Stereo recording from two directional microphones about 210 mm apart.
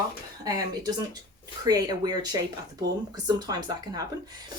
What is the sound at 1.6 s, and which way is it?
A woman's voice, 20° right (ahead or behind).